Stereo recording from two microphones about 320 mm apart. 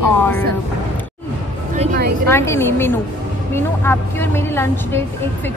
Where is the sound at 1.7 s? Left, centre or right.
Right.